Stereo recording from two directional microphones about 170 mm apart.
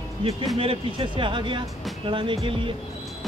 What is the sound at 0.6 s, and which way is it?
Speech, 30° right (ahead or behind).